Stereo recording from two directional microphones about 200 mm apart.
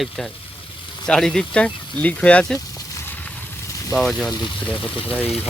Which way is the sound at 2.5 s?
15° left (ahead or behind).